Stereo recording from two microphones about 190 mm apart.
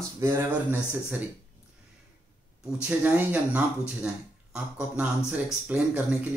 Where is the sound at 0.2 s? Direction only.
10° right (ahead or behind).